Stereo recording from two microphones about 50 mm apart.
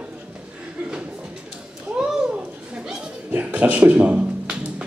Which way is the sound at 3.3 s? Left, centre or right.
Right.